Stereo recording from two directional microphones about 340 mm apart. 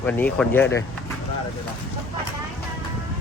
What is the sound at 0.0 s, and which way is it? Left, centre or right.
Speech, centre.